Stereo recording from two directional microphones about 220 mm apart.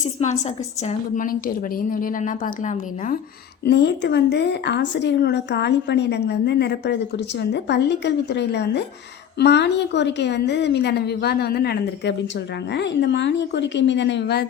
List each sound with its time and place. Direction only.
0.0 s a woman's voice: 30° left (ahead or behind)
3.6 s a woman's voice: 50° left (ahead or behind)